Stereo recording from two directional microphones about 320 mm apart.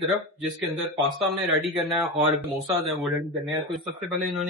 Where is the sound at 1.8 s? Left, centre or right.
Centre.